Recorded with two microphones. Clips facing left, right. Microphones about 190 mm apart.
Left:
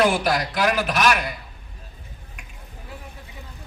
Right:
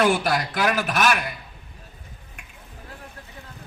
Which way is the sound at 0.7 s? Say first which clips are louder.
Left 1 dB; 45° right (ahead or behind).